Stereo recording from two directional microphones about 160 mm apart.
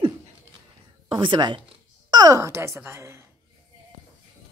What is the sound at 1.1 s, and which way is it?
A woman's voice, 30° right (ahead or behind).